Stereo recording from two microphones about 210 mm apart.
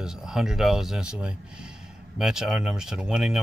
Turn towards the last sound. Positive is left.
turn(degrees=-5)  # may be behind; listen again after turning